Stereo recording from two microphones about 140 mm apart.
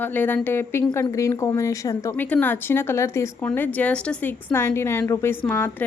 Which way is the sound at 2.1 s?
10° left (ahead or behind).